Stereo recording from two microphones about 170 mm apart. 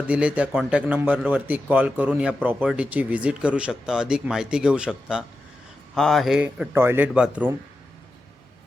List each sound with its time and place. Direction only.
0.1 s a man's voice: 10° right (ahead or behind)